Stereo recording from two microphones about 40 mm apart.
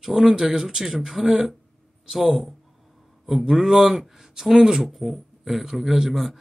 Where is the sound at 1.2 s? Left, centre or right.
Centre.